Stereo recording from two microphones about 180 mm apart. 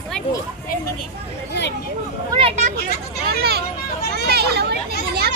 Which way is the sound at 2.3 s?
30° right (ahead or behind).